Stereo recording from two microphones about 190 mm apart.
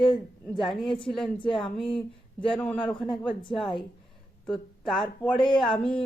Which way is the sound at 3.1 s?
25° left (ahead or behind).